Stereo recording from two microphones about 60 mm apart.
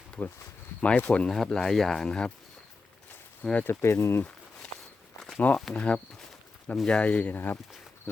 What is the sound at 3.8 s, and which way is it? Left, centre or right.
Speech, left.